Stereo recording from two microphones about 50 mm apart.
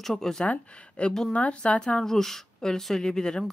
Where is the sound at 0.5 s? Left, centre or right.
Left.